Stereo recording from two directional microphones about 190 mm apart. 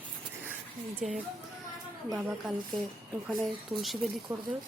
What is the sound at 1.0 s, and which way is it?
Speech, 5° right (ahead or behind).